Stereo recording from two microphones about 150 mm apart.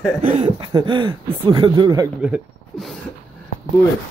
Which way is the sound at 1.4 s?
30° right (ahead or behind).